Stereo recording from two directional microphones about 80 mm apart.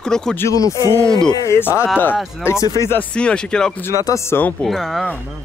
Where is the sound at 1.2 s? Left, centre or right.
Left.